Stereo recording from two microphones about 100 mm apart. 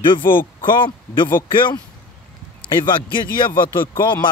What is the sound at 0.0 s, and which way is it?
Speech, 55° left (ahead or behind).